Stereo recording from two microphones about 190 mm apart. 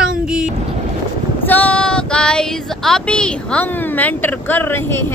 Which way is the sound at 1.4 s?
10° left (ahead or behind).